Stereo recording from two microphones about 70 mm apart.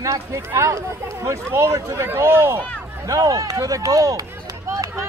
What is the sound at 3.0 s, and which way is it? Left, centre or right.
Speech, right.